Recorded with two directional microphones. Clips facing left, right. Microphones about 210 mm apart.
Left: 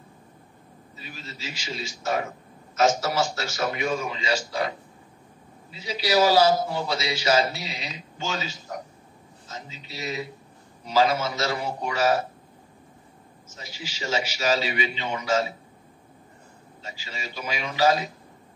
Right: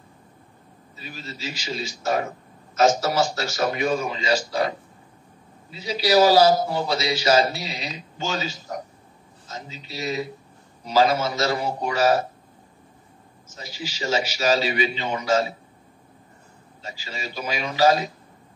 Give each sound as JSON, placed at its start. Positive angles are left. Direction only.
{"t": 0.9, "sound": "a man's voice", "side_deg": -40}
{"t": 13.6, "sound": "a man's voice", "side_deg": -40}
{"t": 16.8, "sound": "a man's voice", "side_deg": -40}